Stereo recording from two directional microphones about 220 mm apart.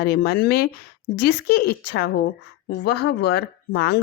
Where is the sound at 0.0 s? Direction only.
45° left (ahead or behind).